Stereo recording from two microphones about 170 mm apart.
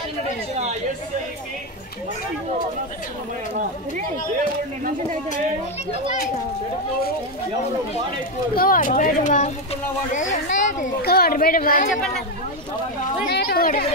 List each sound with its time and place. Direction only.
8.5 s speech: 55° left (ahead or behind)
11.0 s speech: 65° left (ahead or behind)
13.3 s speech: 70° left (ahead or behind)